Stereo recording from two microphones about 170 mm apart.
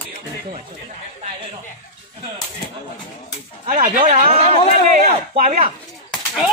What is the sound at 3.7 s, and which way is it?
Speech, 40° right (ahead or behind).